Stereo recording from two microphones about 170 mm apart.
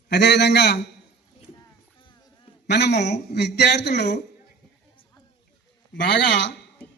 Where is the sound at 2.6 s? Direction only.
80° left.